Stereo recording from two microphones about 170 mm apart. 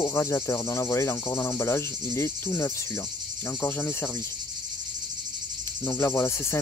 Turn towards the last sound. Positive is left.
turn(degrees=15)  # may be behind; listen again after turning